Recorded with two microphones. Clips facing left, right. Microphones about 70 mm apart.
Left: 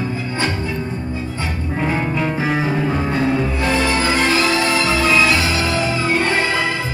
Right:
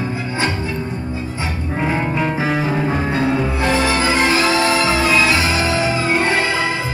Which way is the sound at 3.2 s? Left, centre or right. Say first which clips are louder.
Right 1 dB; right.